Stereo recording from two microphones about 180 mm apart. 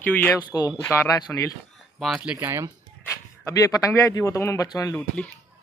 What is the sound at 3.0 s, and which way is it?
Speech, 15° left (ahead or behind).